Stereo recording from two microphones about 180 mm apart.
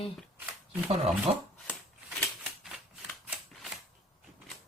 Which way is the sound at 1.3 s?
25° right (ahead or behind).